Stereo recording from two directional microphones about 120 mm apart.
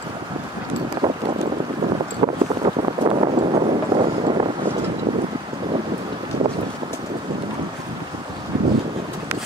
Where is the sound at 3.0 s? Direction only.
55° right (ahead or behind).